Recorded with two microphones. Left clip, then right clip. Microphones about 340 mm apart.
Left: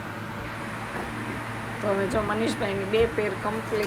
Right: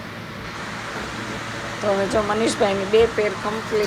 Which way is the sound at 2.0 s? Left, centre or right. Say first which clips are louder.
Right 6 dB; centre.